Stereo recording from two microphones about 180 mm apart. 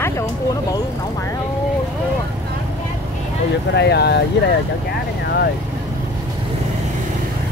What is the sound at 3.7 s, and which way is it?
Speech, 70° left (ahead or behind).